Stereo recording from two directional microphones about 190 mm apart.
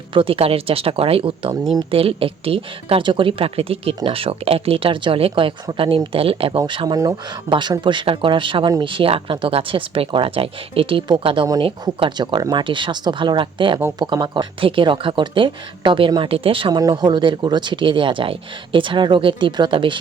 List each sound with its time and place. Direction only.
0.1 s speech: 30° right (ahead or behind)